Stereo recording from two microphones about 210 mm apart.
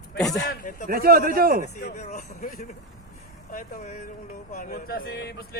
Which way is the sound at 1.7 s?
40° left (ahead or behind).